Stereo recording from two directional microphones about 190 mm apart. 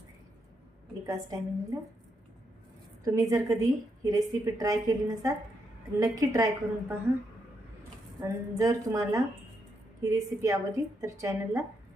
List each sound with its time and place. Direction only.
1.0 s a woman's voice: 15° right (ahead or behind)
3.0 s a woman's voice: 20° right (ahead or behind)
8.2 s a woman's voice: 15° right (ahead or behind)